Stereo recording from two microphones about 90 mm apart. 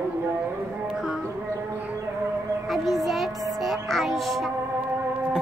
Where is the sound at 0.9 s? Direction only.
5° right (ahead or behind).